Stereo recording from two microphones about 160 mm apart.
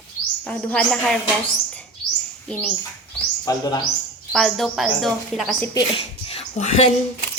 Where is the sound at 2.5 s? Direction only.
5° left (ahead or behind).